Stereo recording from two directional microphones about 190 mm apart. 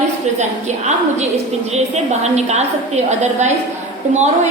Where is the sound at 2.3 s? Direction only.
35° right (ahead or behind).